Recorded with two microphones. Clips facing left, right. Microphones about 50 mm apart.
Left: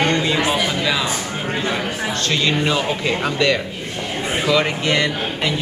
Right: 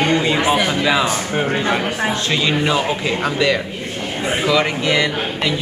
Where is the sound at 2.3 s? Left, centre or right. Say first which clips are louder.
Even; centre.